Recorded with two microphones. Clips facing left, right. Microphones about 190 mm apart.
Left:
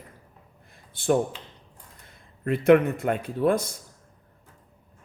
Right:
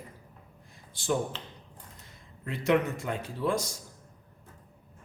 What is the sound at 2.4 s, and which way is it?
Speech, 55° left (ahead or behind).